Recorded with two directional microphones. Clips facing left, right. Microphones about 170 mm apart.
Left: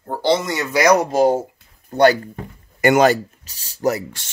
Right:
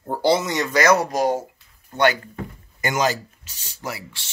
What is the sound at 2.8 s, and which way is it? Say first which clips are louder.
Speech: left 9 dB; 60° left (ahead or behind).